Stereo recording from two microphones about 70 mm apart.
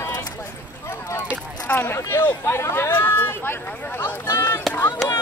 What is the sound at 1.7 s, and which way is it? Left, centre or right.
Speech, left.